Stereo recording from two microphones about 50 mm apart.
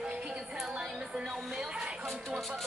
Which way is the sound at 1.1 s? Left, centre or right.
Centre.